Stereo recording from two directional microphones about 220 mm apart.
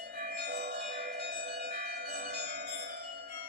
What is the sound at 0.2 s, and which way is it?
Bell, 45° right (ahead or behind).